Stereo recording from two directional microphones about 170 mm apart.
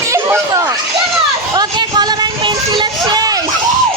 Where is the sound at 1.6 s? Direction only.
25° right (ahead or behind).